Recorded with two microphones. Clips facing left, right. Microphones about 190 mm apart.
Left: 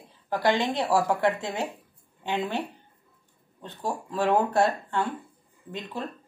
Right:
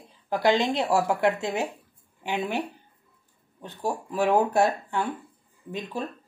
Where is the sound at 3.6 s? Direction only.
10° right (ahead or behind).